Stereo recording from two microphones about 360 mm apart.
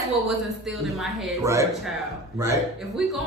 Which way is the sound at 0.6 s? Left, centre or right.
Centre.